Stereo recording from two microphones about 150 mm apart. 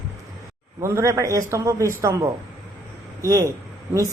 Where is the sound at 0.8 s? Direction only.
20° right (ahead or behind).